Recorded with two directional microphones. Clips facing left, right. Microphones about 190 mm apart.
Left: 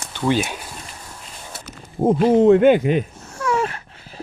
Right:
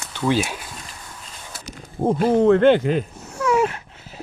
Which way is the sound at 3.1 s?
15° right (ahead or behind).